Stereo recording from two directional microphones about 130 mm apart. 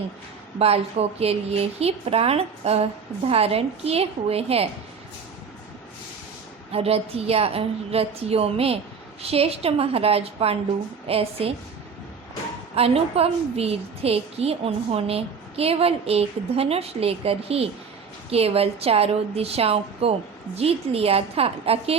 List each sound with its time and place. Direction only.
0.6 s a woman's voice: 50° right (ahead or behind)
6.7 s a woman's voice: 50° right (ahead or behind)
12.7 s a woman's voice: 50° right (ahead or behind)